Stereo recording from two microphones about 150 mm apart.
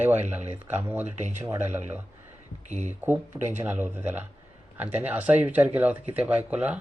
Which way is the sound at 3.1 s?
15° right (ahead or behind).